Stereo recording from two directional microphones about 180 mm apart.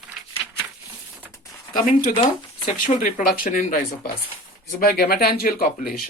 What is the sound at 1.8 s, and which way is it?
Speech, 45° left (ahead or behind).